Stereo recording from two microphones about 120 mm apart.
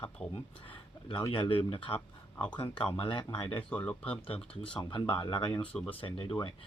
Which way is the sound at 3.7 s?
10° left (ahead or behind).